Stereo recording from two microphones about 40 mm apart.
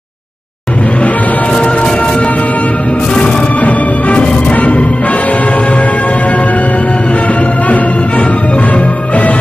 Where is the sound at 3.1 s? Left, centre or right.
Left.